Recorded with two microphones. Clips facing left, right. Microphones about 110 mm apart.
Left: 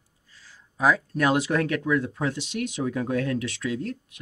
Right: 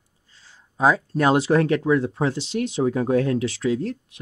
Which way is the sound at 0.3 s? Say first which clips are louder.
Even; 25° right (ahead or behind).